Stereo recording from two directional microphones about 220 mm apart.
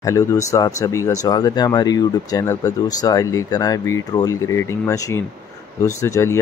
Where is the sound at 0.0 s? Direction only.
15° left (ahead or behind).